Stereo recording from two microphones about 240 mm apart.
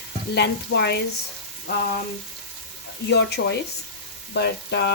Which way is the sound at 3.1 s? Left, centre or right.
Left.